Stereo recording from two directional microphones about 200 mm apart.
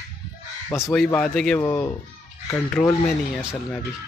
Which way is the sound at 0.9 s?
5° left (ahead or behind).